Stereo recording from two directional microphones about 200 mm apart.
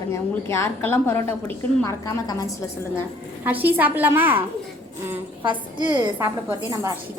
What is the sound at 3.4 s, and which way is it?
A woman's voice, 10° right (ahead or behind).